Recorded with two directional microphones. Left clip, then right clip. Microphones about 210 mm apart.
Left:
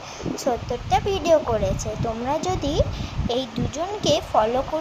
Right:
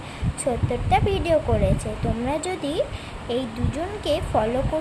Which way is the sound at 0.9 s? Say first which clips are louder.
Left 2 dB; 10° left (ahead or behind).